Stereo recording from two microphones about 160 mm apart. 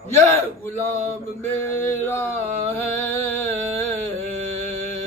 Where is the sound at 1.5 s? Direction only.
10° left (ahead or behind).